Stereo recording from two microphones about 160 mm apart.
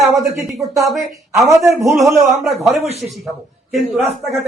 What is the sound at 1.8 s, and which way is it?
Speech, 20° right (ahead or behind).